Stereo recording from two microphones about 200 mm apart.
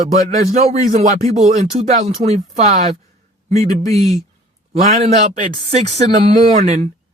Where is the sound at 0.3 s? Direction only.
35° right (ahead or behind).